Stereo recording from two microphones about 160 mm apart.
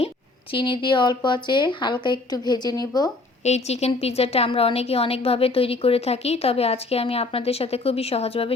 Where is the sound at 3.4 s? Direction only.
45° left (ahead or behind).